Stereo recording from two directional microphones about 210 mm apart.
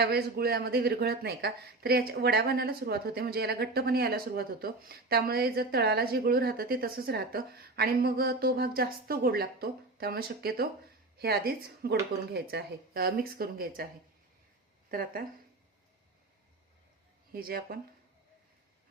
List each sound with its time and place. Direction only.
0.0 s speech: 50° right (ahead or behind)
14.8 s speech: 45° right (ahead or behind)
17.3 s speech: 45° right (ahead or behind)